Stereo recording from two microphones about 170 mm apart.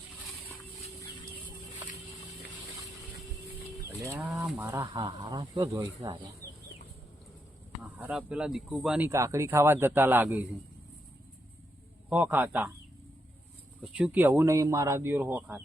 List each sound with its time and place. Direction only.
4.0 s speech: 15° right (ahead or behind)
4.3 s speech: 5° right (ahead or behind)
6.4 s chicken: 55° left (ahead or behind)
7.8 s speech: 5° right (ahead or behind)
9.0 s speech: 15° right (ahead or behind)
12.0 s speech: 10° right (ahead or behind)
13.8 s speech: 5° right (ahead or behind)